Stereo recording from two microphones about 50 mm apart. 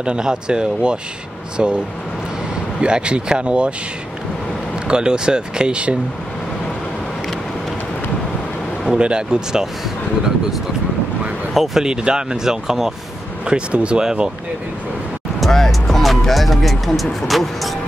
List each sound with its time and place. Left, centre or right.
0.0 s speech: centre
2.8 s speech: right
4.8 s speech: centre
8.9 s speech: centre
11.5 s speech: centre
11.8 s speech: centre
13.5 s speech: right
15.4 s speech: centre